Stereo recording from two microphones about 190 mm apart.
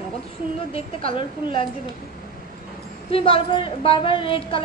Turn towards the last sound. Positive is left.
turn(degrees=30)  # may be behind; listen again after turning